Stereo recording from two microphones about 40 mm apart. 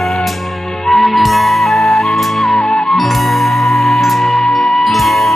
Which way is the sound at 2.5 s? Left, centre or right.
Centre.